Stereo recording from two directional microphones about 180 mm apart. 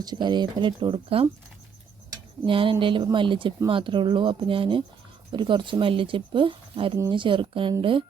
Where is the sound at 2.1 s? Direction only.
30° right (ahead or behind).